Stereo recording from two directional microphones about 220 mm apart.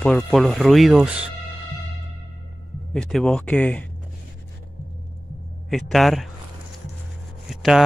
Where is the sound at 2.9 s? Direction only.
Centre (ahead or behind).